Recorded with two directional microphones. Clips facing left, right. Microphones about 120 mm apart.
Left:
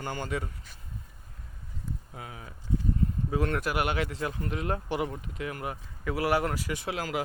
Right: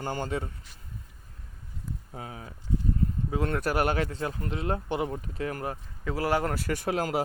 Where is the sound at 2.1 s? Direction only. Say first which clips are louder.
Right 3 dB; 30° right (ahead or behind).